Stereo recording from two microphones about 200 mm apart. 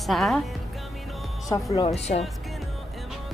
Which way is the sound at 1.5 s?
20° left (ahead or behind).